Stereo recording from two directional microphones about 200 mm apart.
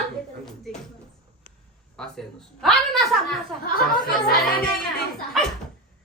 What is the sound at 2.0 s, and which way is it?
A woman's voice, centre (ahead or behind).